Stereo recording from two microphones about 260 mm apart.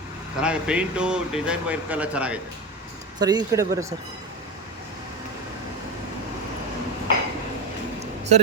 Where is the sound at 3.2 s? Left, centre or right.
Centre.